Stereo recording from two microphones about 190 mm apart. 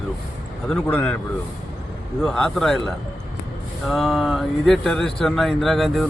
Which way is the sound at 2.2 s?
5° left (ahead or behind).